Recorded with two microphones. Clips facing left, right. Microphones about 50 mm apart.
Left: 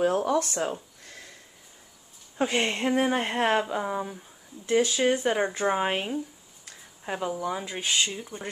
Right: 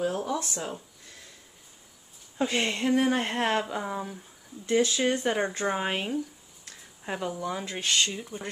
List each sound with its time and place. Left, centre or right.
0.0 s speech: left
2.3 s speech: left
3.1 s speech: centre
8.1 s speech: centre